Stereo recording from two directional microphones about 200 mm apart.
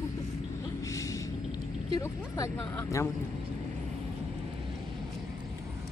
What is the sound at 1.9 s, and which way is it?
Speech, 15° left (ahead or behind).